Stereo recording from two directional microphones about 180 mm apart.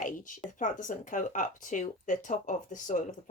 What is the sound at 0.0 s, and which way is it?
Speech, 45° left (ahead or behind).